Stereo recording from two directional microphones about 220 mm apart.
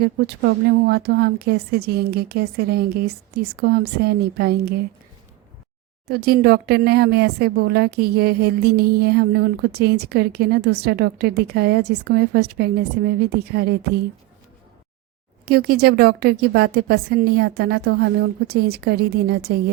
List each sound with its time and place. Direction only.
0.0 s speech: 45° right (ahead or behind)
6.1 s speech: 45° right (ahead or behind)
15.4 s speech: 45° right (ahead or behind)